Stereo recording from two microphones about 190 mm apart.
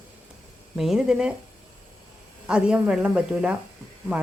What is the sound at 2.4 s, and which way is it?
Speech, 5° right (ahead or behind).